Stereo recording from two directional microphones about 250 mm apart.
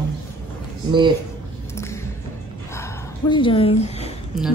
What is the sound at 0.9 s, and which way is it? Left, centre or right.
Speech, centre.